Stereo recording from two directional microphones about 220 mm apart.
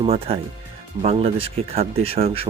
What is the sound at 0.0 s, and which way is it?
Speech, 25° right (ahead or behind).